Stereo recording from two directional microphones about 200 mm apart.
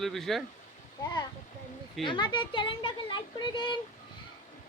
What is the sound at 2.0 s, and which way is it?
Speech, 25° left (ahead or behind).